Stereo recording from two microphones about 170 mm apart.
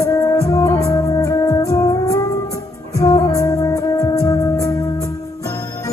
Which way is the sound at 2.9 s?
20° left (ahead or behind).